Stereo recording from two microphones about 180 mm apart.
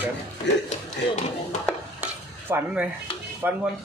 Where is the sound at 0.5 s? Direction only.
75° left (ahead or behind).